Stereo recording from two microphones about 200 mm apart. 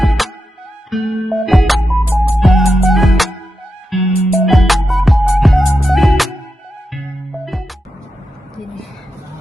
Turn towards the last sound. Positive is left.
turn(degrees=0)  # may be behind; listen again after turning